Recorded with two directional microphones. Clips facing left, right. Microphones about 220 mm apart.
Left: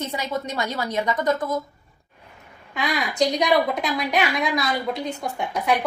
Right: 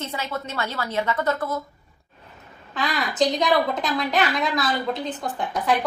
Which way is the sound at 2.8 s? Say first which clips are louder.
Even; 15° left (ahead or behind).